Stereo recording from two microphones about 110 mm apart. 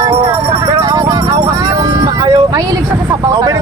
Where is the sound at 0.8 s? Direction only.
40° right (ahead or behind).